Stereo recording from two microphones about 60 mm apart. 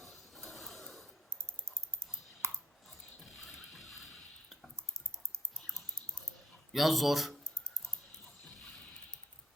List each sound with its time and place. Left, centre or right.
0.0 s printer: centre
2.4 s a sound: right
3.2 s wood: centre
5.5 s typing: centre
6.7 s speech: centre